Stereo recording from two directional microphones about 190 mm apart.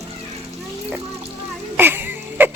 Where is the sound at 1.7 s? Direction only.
10° right (ahead or behind).